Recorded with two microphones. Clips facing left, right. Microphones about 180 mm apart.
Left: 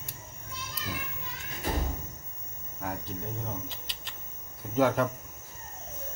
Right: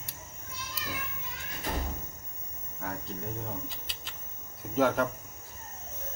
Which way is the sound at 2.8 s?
5° left (ahead or behind).